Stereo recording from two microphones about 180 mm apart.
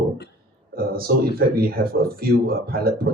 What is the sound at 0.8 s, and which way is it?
Speech, 55° right (ahead or behind).